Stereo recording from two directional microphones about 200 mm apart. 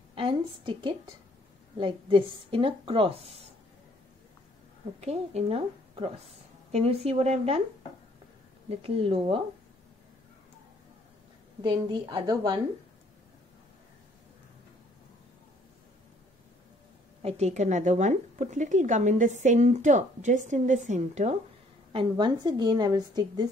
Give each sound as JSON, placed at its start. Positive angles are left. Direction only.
{"t": 0.1, "sound": "a sound", "side_deg": -25}
{"t": 1.8, "sound": "a woman's voice", "side_deg": -25}
{"t": 5.0, "sound": "a woman's voice", "side_deg": -30}
{"t": 8.6, "sound": "a woman's voice", "side_deg": -30}
{"t": 11.6, "sound": "a woman's voice", "side_deg": -20}
{"t": 17.2, "sound": "a woman's voice", "side_deg": -30}
{"t": 21.9, "sound": "a woman's voice", "side_deg": -20}